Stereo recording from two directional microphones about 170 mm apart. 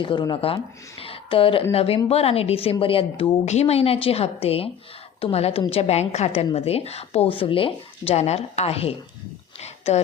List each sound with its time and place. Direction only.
0.0 s a woman's voice: 25° left (ahead or behind)